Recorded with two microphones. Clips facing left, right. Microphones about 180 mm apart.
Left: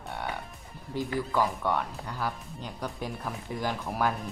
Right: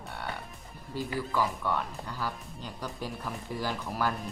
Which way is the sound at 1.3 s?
15° left (ahead or behind).